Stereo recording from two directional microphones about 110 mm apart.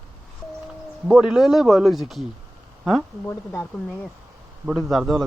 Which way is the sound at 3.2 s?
20° left (ahead or behind).